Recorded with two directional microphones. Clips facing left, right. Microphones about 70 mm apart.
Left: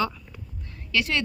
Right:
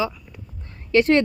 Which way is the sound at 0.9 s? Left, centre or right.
Right.